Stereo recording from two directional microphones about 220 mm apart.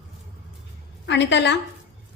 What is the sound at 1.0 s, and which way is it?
Speech, 55° left (ahead or behind).